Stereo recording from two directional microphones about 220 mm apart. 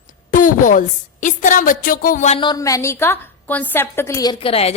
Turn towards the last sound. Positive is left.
turn(degrees=25)  # may be behind; listen again after turning